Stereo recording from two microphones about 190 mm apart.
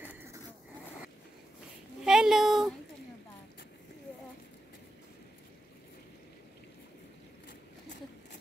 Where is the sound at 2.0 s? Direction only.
5° right (ahead or behind).